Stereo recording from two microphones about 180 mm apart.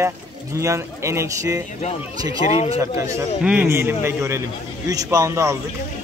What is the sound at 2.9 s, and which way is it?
Speech, 15° right (ahead or behind).